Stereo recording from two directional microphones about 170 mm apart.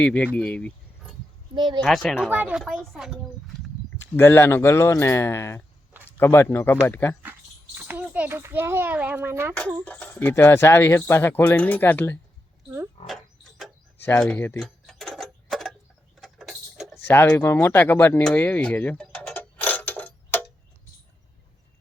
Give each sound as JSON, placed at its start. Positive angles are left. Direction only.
{"t": 0.0, "sound": "speech", "side_deg": 5}
{"t": 1.5, "sound": "speech", "side_deg": -25}
{"t": 1.8, "sound": "speech", "side_deg": 0}
{"t": 3.9, "sound": "speech", "side_deg": 15}
{"t": 7.8, "sound": "a child's voice", "side_deg": -10}
{"t": 9.8, "sound": "speech", "side_deg": 10}
{"t": 13.0, "sound": "speech", "side_deg": 40}
{"t": 14.0, "sound": "clock", "side_deg": 10}
{"t": 16.2, "sound": "a sound", "side_deg": 0}
{"t": 17.1, "sound": "a sound", "side_deg": 15}